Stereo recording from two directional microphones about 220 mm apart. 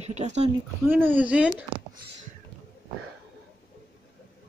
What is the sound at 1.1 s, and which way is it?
Speech, 5° right (ahead or behind).